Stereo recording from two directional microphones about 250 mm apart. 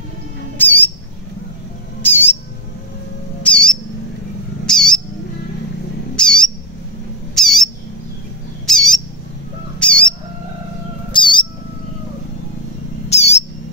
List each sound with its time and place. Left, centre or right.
0.6 s squawk: centre
2.0 s squawk: centre
3.4 s bird: centre
4.6 s owl: centre
6.1 s cat: centre
7.3 s bird: centre
8.6 s squawk: centre
9.8 s bird: centre
11.1 s cat: centre
13.1 s bird: left